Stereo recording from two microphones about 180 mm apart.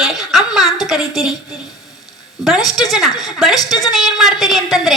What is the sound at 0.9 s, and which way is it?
Speech, centre (ahead or behind).